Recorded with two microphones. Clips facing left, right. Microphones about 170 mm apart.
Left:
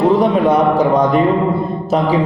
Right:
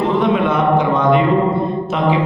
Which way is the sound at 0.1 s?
40° left (ahead or behind).